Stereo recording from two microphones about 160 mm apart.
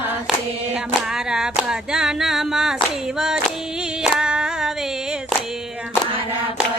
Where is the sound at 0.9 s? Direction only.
5° right (ahead or behind).